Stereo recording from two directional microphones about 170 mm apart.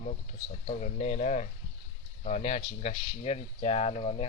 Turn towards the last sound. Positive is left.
turn(degrees=40)  # may be behind; listen again after turning